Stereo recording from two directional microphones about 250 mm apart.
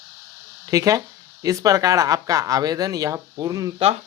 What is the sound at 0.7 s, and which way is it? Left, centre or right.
Speech, centre.